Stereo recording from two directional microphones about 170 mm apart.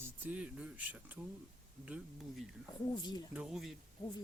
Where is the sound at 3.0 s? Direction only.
25° left (ahead or behind).